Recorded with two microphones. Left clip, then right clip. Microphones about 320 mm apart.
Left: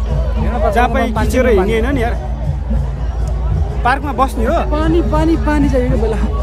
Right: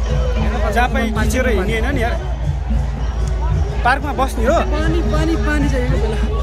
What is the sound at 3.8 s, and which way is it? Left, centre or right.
Speech, centre.